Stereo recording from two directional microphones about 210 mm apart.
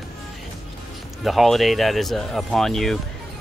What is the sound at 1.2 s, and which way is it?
Speech, centre (ahead or behind).